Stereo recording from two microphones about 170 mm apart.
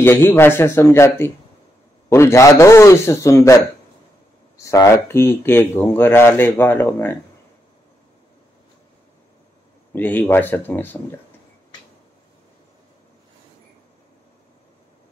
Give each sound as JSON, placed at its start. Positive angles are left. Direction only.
{"t": 0.0, "sound": "speech", "side_deg": 15}
{"t": 9.9, "sound": "speech", "side_deg": 10}